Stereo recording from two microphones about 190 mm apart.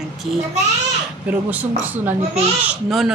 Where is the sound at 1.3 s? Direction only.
10° right (ahead or behind).